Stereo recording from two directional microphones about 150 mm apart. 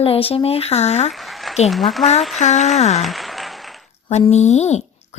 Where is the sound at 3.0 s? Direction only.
Centre (ahead or behind).